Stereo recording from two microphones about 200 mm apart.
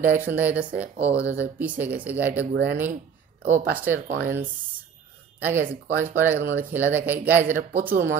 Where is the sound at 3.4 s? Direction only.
10° right (ahead or behind).